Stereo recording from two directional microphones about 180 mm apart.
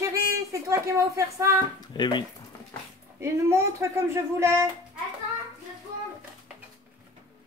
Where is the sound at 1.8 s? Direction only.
25° left (ahead or behind).